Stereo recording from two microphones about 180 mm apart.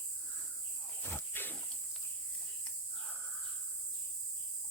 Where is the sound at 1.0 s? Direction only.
10° left (ahead or behind).